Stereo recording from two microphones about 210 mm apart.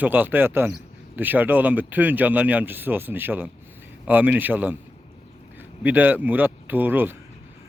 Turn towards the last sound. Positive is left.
turn(degrees=-10)  # may be behind; listen again after turning